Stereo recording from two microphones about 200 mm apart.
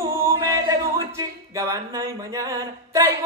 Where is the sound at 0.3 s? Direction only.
15° right (ahead or behind).